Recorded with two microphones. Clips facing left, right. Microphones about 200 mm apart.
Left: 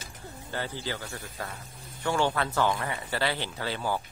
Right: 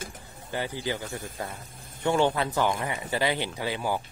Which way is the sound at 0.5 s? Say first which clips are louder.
Right 4 dB; 15° right (ahead or behind).